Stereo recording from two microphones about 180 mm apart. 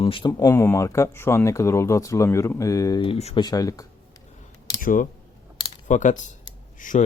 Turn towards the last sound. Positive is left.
turn(degrees=45)  # may be behind; listen again after turning